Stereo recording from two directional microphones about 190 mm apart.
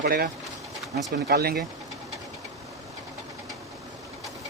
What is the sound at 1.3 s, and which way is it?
Speech, 55° right (ahead or behind).